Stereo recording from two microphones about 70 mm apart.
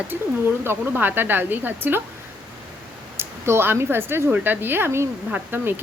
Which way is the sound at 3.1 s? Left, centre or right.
Right.